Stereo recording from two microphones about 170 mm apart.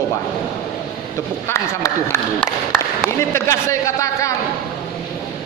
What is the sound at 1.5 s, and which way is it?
A man's voice, 20° left (ahead or behind).